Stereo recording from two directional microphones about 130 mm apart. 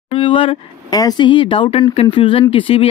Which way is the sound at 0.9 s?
30° left (ahead or behind).